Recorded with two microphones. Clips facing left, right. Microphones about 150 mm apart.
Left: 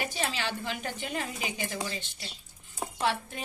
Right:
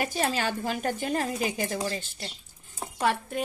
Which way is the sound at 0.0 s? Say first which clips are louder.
Right 5 dB; 45° right (ahead or behind).